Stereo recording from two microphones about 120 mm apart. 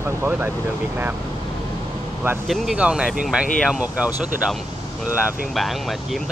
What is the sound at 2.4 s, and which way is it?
Speech, centre (ahead or behind).